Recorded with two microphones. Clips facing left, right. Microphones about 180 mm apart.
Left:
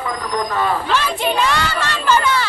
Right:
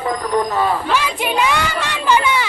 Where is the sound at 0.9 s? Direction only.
10° right (ahead or behind).